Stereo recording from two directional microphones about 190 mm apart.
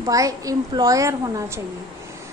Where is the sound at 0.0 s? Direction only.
15° right (ahead or behind).